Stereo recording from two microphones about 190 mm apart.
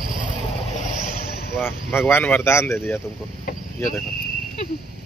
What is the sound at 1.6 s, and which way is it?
Speech, 10° left (ahead or behind).